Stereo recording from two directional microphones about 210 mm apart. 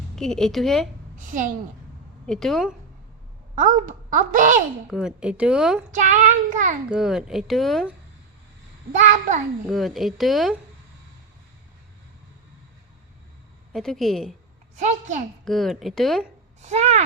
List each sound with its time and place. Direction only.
0.2 s speech: centre (ahead or behind)
1.1 s a woman's voice: 35° right (ahead or behind)
2.2 s speech: centre (ahead or behind)
3.5 s a woman's voice: 40° right (ahead or behind)
4.9 s speech: 5° right (ahead or behind)
5.9 s a woman's voice: 35° right (ahead or behind)
6.9 s speech: 5° right (ahead or behind)
8.9 s a woman's voice: 35° right (ahead or behind)
9.6 s speech: centre (ahead or behind)
13.7 s speech: centre (ahead or behind)
14.8 s a woman's voice: 35° right (ahead or behind)
15.4 s speech: centre (ahead or behind)
16.6 s speech: 35° right (ahead or behind)